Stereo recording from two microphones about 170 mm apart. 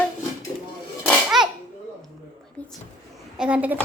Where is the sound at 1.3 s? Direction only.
Centre (ahead or behind).